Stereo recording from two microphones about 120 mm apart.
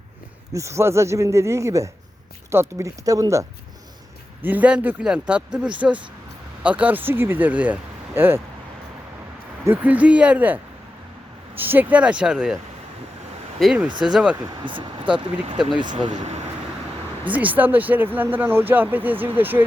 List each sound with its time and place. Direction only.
0.5 s speech: 25° right (ahead or behind)
4.4 s speech: 10° right (ahead or behind)
9.6 s speech: 15° right (ahead or behind)
14.0 s speech: 5° right (ahead or behind)
14.4 s speech: 45° right (ahead or behind)
15.7 s speech: 40° right (ahead or behind)
17.2 s speech: 15° right (ahead or behind)